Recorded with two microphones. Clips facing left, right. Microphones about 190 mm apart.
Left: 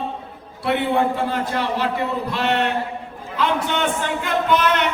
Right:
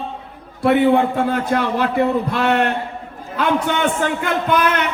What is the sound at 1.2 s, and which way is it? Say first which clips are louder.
Speech: right 4 dB; 55° right (ahead or behind).